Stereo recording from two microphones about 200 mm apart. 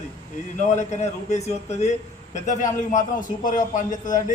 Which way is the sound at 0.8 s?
35° left (ahead or behind).